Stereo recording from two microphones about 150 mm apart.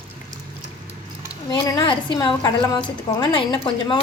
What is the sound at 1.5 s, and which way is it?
A woman's voice, 30° left (ahead or behind).